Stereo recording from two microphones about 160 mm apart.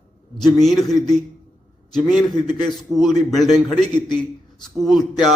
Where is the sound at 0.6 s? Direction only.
Centre (ahead or behind).